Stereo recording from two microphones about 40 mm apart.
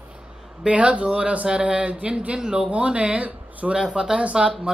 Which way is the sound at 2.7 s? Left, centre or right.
Right.